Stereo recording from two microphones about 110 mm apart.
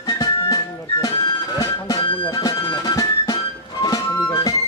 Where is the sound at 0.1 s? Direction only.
35° left (ahead or behind).